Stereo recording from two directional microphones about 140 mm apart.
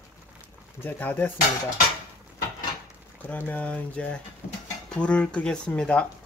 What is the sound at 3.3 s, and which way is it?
Speech, 10° left (ahead or behind).